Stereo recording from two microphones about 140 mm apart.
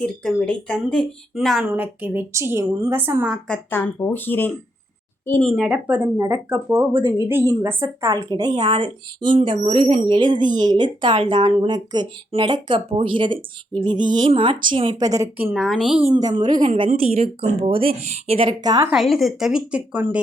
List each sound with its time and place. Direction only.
0.0 s speech: 5° left (ahead or behind)
1.6 s a woman's voice: 10° right (ahead or behind)
3.4 s speech: 10° left (ahead or behind)
5.5 s speech: centre (ahead or behind)
6.2 s speech: 25° right (ahead or behind)
15.5 s speech: centre (ahead or behind)
16.1 s speech: 30° right (ahead or behind)
18.9 s speech: centre (ahead or behind)